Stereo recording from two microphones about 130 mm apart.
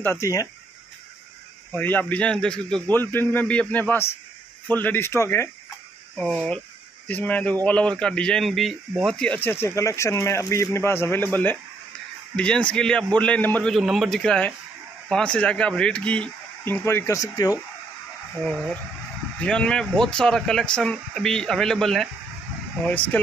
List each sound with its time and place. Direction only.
0.0 s speech: 20° left (ahead or behind)
1.7 s speech: 15° left (ahead or behind)
7.1 s speech: 10° left (ahead or behind)
18.4 s speech: 5° left (ahead or behind)